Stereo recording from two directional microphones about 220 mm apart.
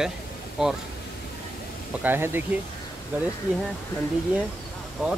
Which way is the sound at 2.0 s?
10° right (ahead or behind).